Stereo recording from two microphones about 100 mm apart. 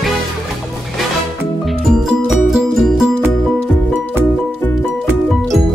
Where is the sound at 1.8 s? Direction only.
5° right (ahead or behind).